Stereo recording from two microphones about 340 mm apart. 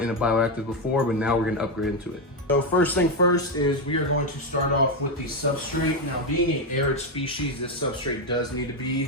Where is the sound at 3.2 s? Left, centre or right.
Left.